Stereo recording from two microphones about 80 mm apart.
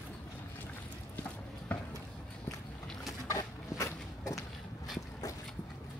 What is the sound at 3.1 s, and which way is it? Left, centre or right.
Walk, left.